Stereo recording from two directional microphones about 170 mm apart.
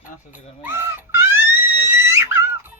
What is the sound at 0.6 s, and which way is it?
Music, 15° right (ahead or behind).